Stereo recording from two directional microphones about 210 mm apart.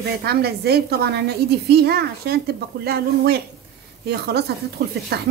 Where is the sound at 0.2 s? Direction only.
50° right (ahead or behind).